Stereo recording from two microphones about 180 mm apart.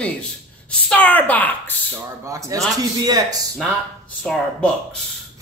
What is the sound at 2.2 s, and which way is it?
A man's voice, 15° right (ahead or behind).